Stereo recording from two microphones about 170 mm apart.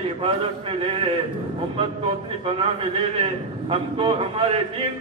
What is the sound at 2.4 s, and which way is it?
A man's voice, 35° right (ahead or behind).